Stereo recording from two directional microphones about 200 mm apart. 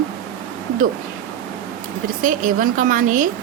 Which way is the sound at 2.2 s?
40° right (ahead or behind).